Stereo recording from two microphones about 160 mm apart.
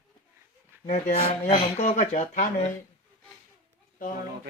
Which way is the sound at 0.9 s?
45° left (ahead or behind).